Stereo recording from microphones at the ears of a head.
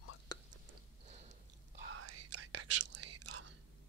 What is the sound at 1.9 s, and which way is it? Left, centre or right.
Whispering, right.